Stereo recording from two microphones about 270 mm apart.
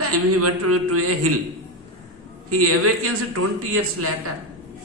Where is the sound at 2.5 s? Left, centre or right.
Right.